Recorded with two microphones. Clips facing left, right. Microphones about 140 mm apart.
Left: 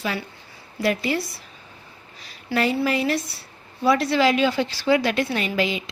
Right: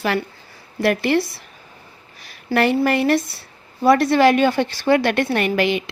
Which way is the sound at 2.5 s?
65° right (ahead or behind).